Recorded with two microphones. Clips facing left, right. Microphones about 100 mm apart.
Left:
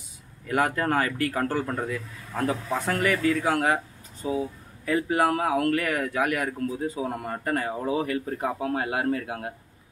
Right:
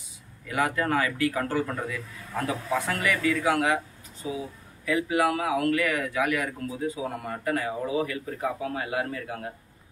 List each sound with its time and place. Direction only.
0.5 s a man's voice: 45° left (ahead or behind)